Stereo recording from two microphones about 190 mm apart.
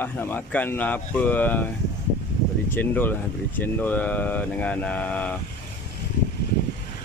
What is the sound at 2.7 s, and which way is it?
Speech, 10° left (ahead or behind).